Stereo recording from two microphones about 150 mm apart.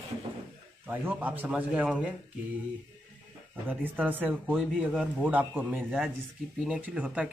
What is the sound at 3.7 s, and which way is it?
Speech, 10° right (ahead or behind).